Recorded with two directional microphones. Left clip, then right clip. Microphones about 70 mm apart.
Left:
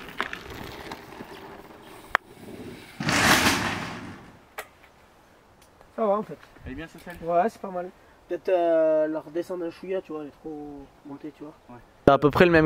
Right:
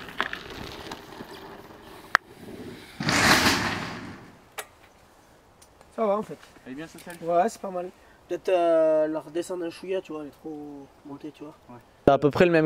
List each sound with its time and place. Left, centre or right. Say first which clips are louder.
0.0 s a sound: right 2 dB; right; by 4.3 s centre
5.9 s a sound: left 1 dB; right
6.6 s speech: left 1 dB; centre
7.1 s speech: even; right
11.4 s speech: even; right
12.0 s speech: left 1 dB; centre